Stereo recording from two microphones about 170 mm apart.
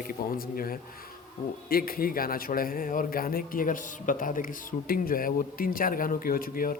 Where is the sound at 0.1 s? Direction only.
60° left (ahead or behind).